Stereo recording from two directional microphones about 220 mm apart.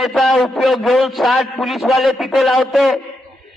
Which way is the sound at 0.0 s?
Centre (ahead or behind).